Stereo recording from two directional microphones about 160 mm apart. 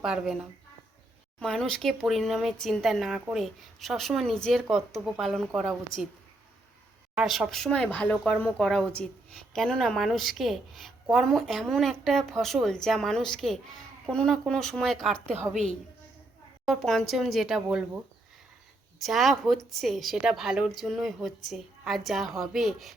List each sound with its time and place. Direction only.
0.0 s speech: 5° right (ahead or behind)
1.4 s speech: 5° left (ahead or behind)
7.2 s speech: centre (ahead or behind)
16.6 s speech: centre (ahead or behind)
18.9 s speech: centre (ahead or behind)